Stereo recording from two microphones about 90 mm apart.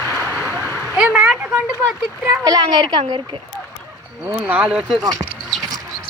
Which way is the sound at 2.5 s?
50° right (ahead or behind).